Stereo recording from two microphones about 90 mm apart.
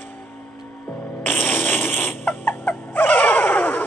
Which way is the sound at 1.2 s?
20° left (ahead or behind).